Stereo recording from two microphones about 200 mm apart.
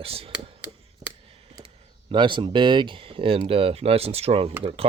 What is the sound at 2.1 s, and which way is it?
Speech, 25° right (ahead or behind).